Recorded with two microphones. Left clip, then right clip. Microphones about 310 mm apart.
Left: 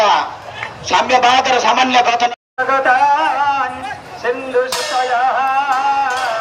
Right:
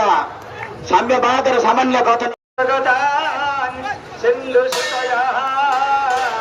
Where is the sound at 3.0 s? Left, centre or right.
Centre.